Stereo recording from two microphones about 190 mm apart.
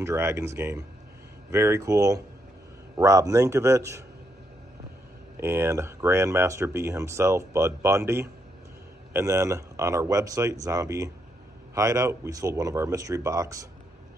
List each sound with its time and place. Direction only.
0.0 s speech: 15° right (ahead or behind)
5.4 s speech: 15° right (ahead or behind)